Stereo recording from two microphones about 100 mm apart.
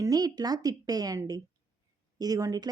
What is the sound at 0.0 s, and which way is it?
A woman's voice, 35° right (ahead or behind).